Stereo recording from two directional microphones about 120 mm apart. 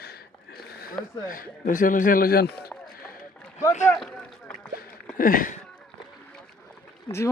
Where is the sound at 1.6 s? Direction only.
90° left.